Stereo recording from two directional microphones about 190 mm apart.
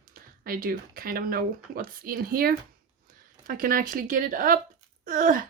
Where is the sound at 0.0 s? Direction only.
50° right (ahead or behind).